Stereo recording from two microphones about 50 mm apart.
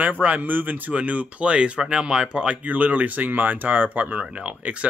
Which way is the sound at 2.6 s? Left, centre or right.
Right.